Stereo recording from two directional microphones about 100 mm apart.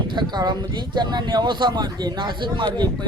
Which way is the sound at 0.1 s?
50° right (ahead or behind).